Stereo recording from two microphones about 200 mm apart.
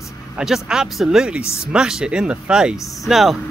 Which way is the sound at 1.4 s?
15° left (ahead or behind).